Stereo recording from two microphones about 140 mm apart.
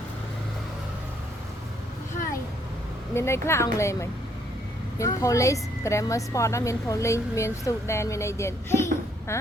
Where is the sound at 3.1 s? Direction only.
20° left (ahead or behind).